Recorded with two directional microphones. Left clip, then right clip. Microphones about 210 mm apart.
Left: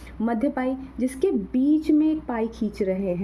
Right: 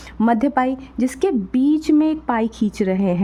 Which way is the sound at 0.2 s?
35° right (ahead or behind).